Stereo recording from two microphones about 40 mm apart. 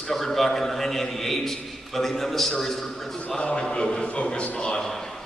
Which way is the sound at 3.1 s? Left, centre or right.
Left.